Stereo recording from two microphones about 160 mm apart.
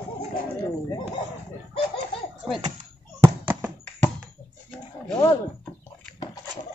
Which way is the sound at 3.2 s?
15° right (ahead or behind).